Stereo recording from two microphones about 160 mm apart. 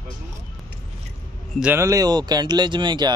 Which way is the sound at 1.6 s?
15° right (ahead or behind).